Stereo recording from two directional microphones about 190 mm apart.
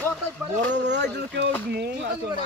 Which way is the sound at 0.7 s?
65° right (ahead or behind).